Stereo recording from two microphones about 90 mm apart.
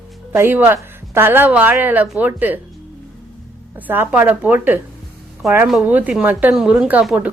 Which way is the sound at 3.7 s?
25° right (ahead or behind).